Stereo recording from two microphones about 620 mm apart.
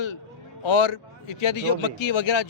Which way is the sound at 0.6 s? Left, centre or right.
Left.